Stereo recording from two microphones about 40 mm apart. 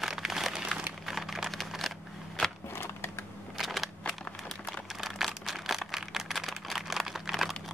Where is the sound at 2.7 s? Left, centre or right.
Left.